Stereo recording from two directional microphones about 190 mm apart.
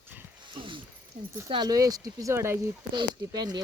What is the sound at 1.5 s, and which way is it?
Speech, 20° right (ahead or behind).